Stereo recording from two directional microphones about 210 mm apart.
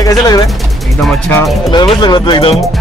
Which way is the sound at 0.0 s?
15° left (ahead or behind).